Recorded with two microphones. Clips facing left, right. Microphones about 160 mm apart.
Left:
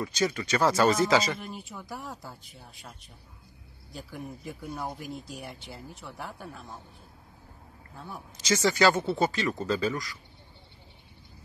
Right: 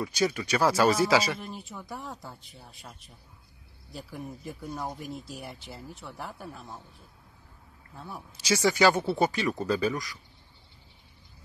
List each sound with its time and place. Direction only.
0.0 s speech: 10° right (ahead or behind)
7.9 s a man's voice: centre (ahead or behind)
8.5 s speech: 10° right (ahead or behind)